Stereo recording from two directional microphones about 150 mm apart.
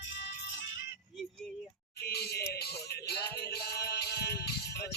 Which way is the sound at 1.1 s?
Centre (ahead or behind).